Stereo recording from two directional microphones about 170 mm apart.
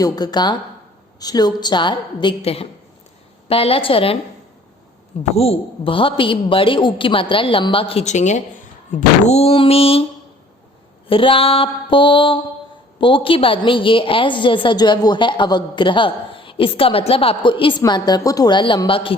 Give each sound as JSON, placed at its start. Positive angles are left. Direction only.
{"t": 0.0, "sound": "a woman's voice", "side_deg": 25}
{"t": 5.3, "sound": "a woman's voice", "side_deg": 35}
{"t": 11.1, "sound": "a woman's voice", "side_deg": 30}